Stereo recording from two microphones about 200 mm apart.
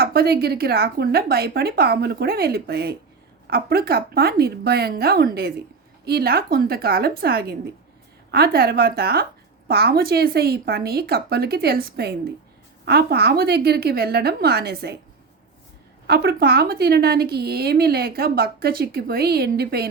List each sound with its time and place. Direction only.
0.0 s a woman's voice: 50° right (ahead or behind)
16.0 s a woman's voice: 50° right (ahead or behind)